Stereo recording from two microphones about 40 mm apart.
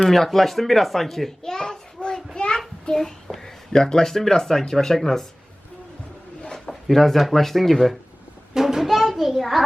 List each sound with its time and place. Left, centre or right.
0.0 s speech: centre
1.4 s a sound: centre
2.9 s a sound: centre
3.7 s speech: centre
6.7 s speech: centre
8.5 s music: centre
9.0 s a child's voice: centre